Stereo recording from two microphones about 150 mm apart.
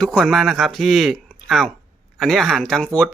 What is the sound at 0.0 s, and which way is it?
Speech, 5° left (ahead or behind).